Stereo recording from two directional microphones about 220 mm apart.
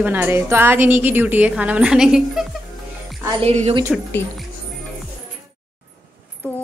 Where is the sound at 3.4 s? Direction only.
30° right (ahead or behind).